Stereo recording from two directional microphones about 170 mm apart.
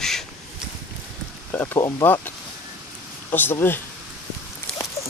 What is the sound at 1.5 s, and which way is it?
Speech, 10° left (ahead or behind).